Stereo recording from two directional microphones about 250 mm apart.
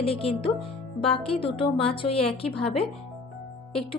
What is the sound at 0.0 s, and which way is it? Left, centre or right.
A woman's voice, left.